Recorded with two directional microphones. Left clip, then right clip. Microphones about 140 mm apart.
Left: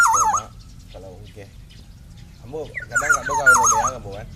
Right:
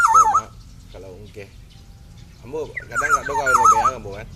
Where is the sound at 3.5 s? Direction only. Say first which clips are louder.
Right 3 dB; 15° right (ahead or behind).